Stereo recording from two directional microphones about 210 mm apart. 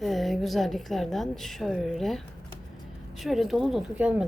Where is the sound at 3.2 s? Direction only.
Centre (ahead or behind).